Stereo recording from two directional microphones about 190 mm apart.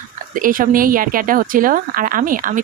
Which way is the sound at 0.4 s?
45° right (ahead or behind).